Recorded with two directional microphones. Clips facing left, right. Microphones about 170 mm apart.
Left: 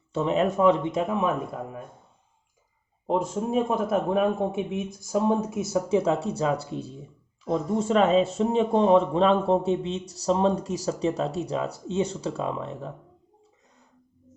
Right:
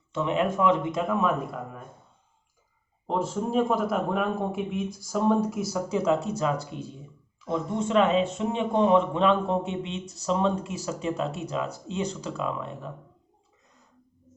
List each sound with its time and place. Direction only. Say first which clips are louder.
0.1 s speech: left 2 dB; 35° left (ahead or behind)
3.7 s speech: left 1 dB; 25° left (ahead or behind)